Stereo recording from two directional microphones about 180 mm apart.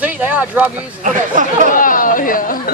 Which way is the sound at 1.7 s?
50° left (ahead or behind).